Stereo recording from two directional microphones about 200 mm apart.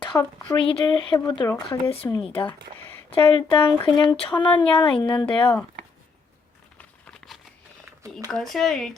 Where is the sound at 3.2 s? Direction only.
25° left (ahead or behind).